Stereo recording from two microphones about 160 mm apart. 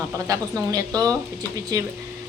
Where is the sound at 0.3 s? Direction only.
20° right (ahead or behind).